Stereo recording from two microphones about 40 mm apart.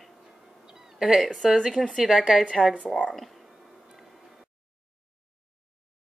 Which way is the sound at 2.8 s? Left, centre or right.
Left.